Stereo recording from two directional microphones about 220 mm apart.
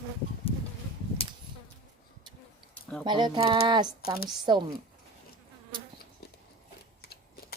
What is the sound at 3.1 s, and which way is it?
Speech, 20° right (ahead or behind).